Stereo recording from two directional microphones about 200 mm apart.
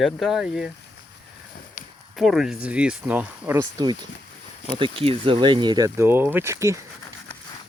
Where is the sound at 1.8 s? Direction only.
40° left (ahead or behind).